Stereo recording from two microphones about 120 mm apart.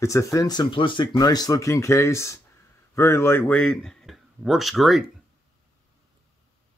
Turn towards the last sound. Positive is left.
turn(degrees=0)  # may be behind; listen again after turning